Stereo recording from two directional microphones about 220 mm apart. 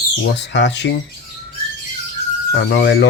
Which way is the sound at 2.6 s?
50° left (ahead or behind).